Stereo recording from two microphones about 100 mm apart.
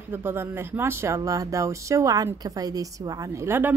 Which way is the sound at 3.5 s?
20° right (ahead or behind).